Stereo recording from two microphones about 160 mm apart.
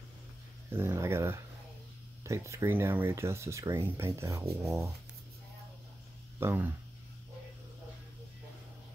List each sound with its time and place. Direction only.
0.7 s speech: 15° right (ahead or behind)
6.4 s speech: 10° right (ahead or behind)